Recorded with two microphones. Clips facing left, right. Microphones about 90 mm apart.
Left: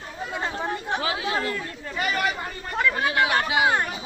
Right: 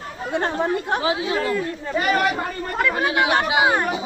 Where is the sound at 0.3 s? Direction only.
65° right (ahead or behind).